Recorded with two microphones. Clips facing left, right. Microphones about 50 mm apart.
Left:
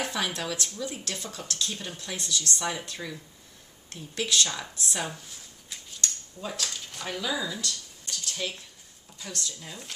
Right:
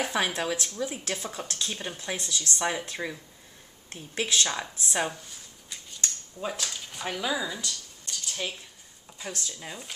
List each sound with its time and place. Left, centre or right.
0.1 s speech: right
5.9 s scissors: right
6.6 s speech: centre
7.1 s speech: centre
8.1 s a sound: centre
8.4 s speech: centre